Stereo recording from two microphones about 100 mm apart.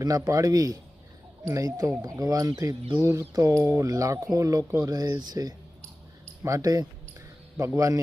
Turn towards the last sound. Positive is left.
turn(degrees=-30)  # may be behind; listen again after turning